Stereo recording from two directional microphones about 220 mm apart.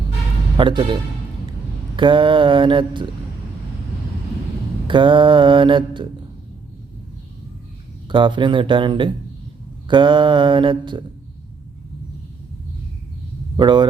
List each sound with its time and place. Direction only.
0.5 s mantra: 20° right (ahead or behind)
2.0 s mantra: 20° right (ahead or behind)
4.9 s mantra: 20° right (ahead or behind)
8.0 s mantra: 20° right (ahead or behind)
13.6 s mantra: 20° right (ahead or behind)